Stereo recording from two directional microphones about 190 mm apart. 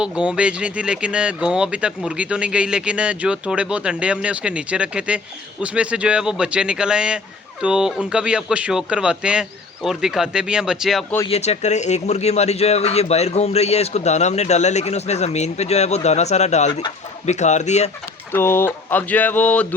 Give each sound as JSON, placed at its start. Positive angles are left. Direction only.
{"t": 0.0, "sound": "speech", "side_deg": -5}
{"t": 11.3, "sound": "speech", "side_deg": 35}
{"t": 18.3, "sound": "speech", "side_deg": 10}